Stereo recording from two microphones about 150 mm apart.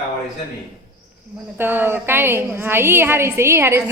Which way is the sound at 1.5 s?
15° right (ahead or behind).